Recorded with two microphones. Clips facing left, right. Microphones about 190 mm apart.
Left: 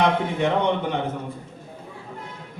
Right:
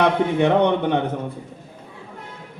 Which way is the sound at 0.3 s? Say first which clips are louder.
Right 5 dB; 65° right (ahead or behind).